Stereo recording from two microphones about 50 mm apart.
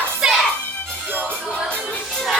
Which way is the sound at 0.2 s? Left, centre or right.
Centre.